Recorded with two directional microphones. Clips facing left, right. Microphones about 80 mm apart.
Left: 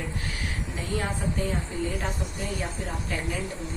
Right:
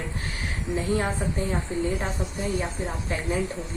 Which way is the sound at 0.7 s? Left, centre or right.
Right.